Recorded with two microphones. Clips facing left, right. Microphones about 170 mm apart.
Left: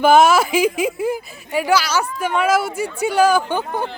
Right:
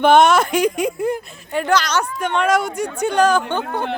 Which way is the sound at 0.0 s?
5° left (ahead or behind).